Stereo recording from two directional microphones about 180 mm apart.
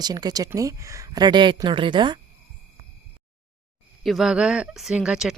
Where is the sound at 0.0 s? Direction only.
20° right (ahead or behind).